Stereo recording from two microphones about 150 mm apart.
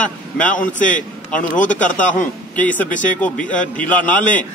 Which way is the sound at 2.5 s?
10° left (ahead or behind).